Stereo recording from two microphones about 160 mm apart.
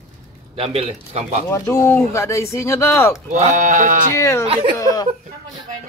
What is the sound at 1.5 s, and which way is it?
Speech, 15° left (ahead or behind).